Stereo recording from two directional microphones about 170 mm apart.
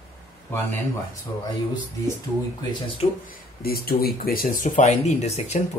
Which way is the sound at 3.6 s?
65° left (ahead or behind).